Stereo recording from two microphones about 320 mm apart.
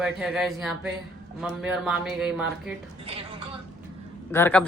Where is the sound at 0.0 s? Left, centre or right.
Centre.